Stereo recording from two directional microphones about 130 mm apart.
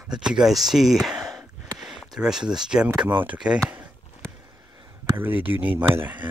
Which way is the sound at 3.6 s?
10° right (ahead or behind).